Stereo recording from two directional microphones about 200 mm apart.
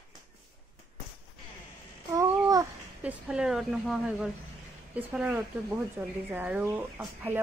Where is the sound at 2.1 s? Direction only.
15° right (ahead or behind).